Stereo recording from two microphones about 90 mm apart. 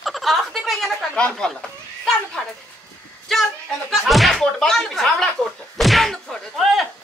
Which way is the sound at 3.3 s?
5° left (ahead or behind).